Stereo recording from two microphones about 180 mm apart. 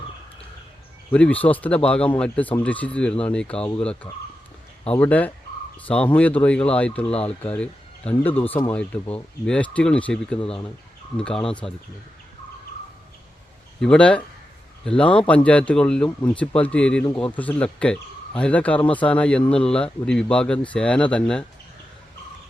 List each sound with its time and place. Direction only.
1.1 s speech: 5° left (ahead or behind)
10.4 s speech: 30° left (ahead or behind)
11.2 s speech: 5° left (ahead or behind)
13.8 s speech: 5° left (ahead or behind)